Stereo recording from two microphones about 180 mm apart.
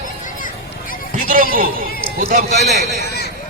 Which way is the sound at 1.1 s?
50° right (ahead or behind).